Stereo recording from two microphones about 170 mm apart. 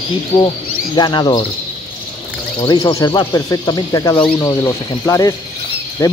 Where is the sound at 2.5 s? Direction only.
25° left (ahead or behind).